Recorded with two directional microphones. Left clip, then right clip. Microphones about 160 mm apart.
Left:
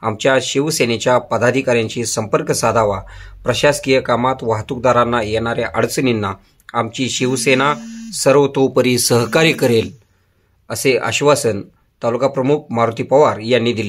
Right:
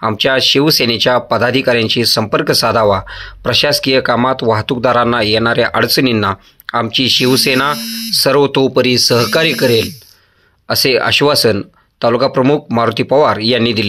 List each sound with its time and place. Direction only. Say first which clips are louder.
0.0 s speech: right 3 dB; 25° right (ahead or behind); by 9.8 s 5° right (ahead or behind)
10.9 s speech: right 1 dB; 25° right (ahead or behind)